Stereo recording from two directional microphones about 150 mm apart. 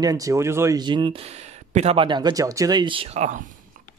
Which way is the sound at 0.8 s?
30° right (ahead or behind).